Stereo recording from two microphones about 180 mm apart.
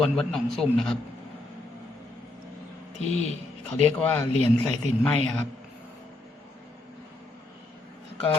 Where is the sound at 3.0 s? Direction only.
40° left (ahead or behind).